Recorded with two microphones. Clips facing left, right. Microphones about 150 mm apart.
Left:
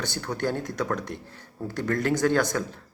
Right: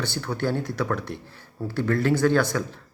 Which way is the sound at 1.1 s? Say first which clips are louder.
Right 1 dB; 55° left (ahead or behind).